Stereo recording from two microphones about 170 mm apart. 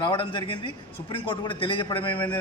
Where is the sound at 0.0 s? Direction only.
25° left (ahead or behind).